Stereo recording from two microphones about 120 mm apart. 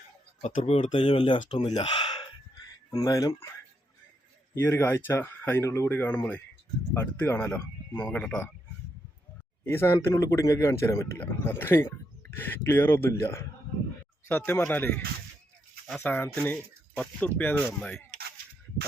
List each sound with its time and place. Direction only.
0.5 s speech: 60° left (ahead or behind)
0.9 s speech: 45° left (ahead or behind)
4.5 s speech: 20° left (ahead or behind)
9.6 s speech: 20° left (ahead or behind)